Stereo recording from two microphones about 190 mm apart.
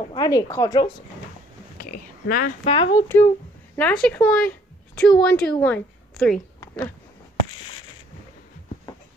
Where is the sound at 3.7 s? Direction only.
5° left (ahead or behind).